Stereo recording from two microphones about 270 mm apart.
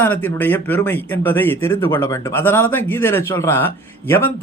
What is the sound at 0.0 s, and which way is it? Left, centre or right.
Speech, centre.